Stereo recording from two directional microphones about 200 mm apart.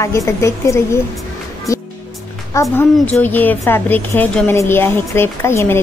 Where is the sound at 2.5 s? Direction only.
15° left (ahead or behind).